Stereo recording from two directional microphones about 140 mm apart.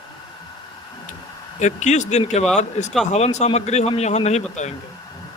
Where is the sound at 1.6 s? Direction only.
60° left (ahead or behind).